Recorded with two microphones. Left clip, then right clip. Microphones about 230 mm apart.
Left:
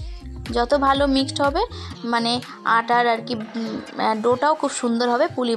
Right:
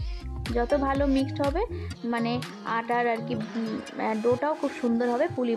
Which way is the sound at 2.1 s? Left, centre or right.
Centre.